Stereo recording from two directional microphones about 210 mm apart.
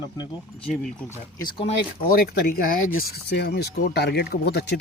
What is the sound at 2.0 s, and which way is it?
Speech, 45° left (ahead or behind).